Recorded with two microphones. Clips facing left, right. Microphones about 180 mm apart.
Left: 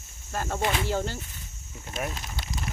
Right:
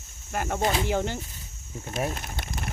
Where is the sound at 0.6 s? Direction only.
35° right (ahead or behind).